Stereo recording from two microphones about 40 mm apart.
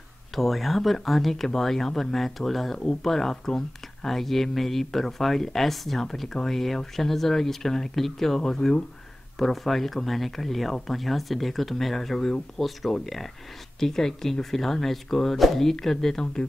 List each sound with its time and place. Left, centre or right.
0.3 s speech: centre